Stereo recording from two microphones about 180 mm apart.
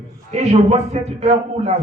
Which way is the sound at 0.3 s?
35° right (ahead or behind).